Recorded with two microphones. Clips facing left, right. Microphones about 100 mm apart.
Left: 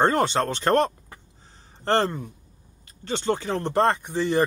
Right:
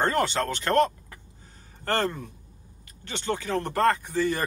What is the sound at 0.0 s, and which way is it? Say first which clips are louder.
Speech: left 4 dB; 25° left (ahead or behind).